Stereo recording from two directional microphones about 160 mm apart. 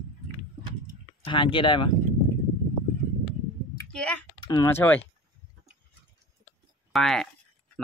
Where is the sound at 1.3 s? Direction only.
30° left (ahead or behind).